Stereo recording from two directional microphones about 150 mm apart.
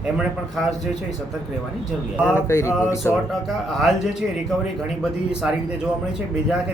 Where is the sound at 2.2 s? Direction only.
15° left (ahead or behind).